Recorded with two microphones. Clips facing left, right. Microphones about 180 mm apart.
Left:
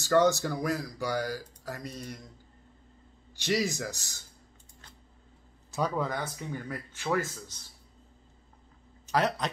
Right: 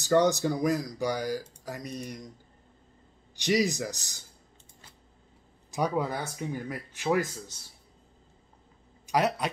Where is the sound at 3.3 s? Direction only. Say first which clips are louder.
Right 3 dB; 15° right (ahead or behind).